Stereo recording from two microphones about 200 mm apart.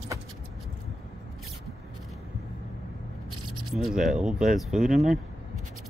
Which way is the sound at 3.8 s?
Centre (ahead or behind).